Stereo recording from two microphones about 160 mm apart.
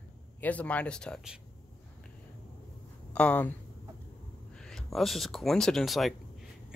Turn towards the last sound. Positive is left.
turn(degrees=0)  # may be behind; listen again after turning